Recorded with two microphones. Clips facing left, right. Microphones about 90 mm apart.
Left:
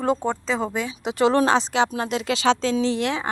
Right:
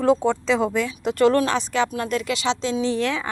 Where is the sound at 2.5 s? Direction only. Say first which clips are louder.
Left 6 dB; 60° left (ahead or behind).